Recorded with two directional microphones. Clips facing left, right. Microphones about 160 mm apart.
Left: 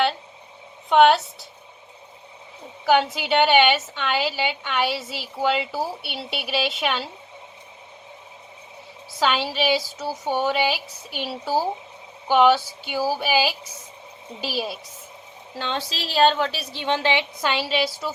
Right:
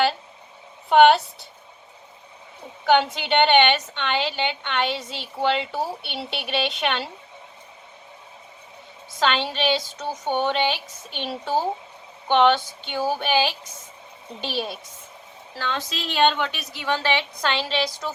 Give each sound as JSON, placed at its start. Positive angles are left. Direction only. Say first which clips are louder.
{"t": 0.9, "sound": "a woman's voice", "louder": "right 1 dB", "side_deg": 0}
{"t": 2.8, "sound": "a woman's voice", "louder": "even", "side_deg": 0}
{"t": 9.1, "sound": "a woman's voice", "louder": "left 1 dB", "side_deg": 5}
{"t": 12.3, "sound": "a sound", "louder": "left 1 dB", "side_deg": 5}
{"t": 14.4, "sound": "a woman's voice", "louder": "left 1 dB", "side_deg": 5}
{"t": 15.5, "sound": "a woman's voice", "louder": "even", "side_deg": 25}